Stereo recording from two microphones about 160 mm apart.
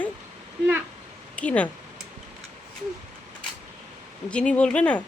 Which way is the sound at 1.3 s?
10° left (ahead or behind).